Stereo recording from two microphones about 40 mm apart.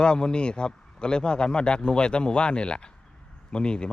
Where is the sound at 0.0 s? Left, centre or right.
Left.